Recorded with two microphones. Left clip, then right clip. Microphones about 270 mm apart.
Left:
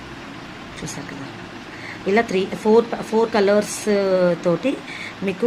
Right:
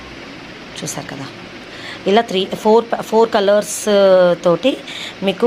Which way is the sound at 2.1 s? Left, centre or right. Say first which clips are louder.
Right 4 dB; centre.